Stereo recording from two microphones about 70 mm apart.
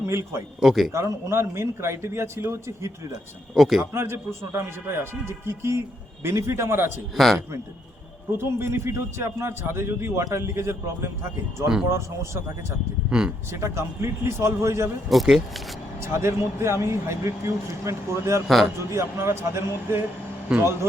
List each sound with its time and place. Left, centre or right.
0.0 s a man's voice: right
0.6 s speech: centre
0.9 s speech: right
3.5 s speech: centre
3.9 s speech: right
7.2 s speech: centre
8.5 s speech: right
13.1 s speech: centre
13.5 s speech: right
15.1 s speech: centre
16.0 s speech: right
18.4 s speech: centre
18.8 s speech: right
20.5 s speech: centre